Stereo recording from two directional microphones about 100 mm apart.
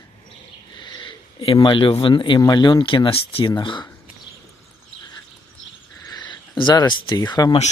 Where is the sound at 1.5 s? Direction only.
50° left (ahead or behind).